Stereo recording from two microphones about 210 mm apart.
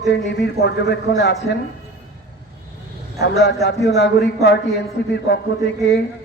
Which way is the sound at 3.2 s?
50° left (ahead or behind).